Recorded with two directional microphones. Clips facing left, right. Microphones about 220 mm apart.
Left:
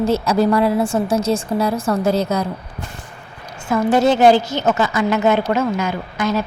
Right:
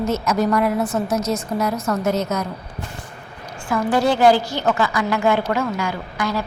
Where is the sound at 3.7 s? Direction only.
25° left (ahead or behind).